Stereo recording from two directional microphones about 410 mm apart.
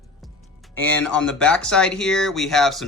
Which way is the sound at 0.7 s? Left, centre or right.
Centre.